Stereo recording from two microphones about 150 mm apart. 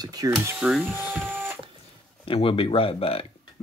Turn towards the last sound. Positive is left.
turn(degrees=40)  # may be behind; listen again after turning